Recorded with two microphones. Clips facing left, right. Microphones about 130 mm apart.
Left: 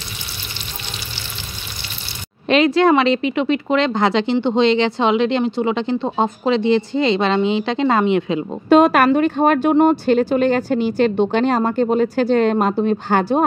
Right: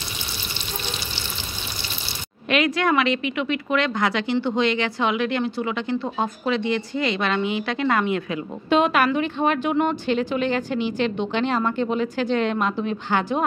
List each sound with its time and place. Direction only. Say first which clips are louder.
2.4 s a woman's voice: left 7 dB; 30° left (ahead or behind)
8.6 s a woman's voice: left 7 dB; 40° left (ahead or behind)